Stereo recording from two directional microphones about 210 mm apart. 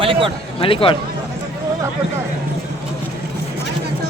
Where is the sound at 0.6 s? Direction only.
25° left (ahead or behind).